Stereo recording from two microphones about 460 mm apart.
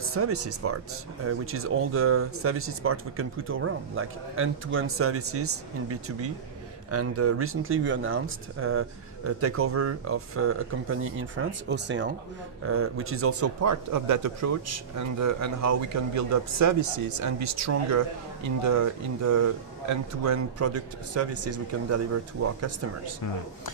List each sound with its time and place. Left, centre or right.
0.0 s speech: right